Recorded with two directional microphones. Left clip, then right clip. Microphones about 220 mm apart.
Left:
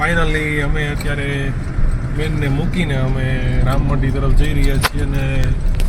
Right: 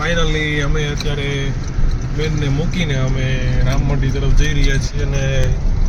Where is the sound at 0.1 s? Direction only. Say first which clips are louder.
Left 1 dB; 5° right (ahead or behind).